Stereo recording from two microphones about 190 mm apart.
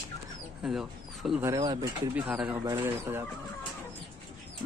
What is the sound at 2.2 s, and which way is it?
Speech, 5° right (ahead or behind).